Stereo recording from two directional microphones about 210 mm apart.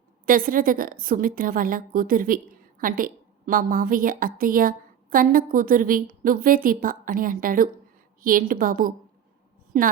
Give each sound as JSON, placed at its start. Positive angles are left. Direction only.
{"t": 0.3, "sound": "a woman's voice", "side_deg": -40}